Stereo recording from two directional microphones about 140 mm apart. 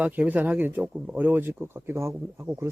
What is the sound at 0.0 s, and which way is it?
Speech, 10° right (ahead or behind).